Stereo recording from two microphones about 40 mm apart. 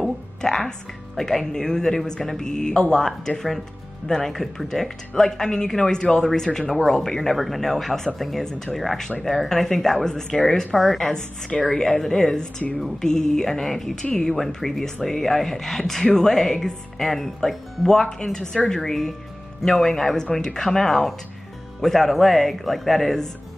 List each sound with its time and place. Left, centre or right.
0.4 s speech: centre